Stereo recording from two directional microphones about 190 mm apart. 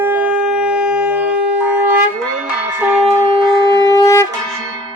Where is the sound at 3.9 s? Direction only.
15° left (ahead or behind).